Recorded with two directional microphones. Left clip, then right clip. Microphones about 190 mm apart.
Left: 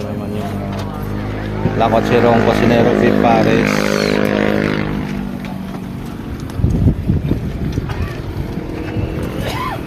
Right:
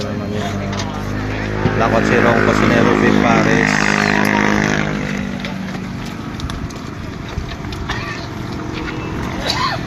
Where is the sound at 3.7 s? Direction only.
35° right (ahead or behind).